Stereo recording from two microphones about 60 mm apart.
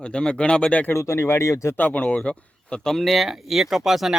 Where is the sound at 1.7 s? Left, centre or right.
Left.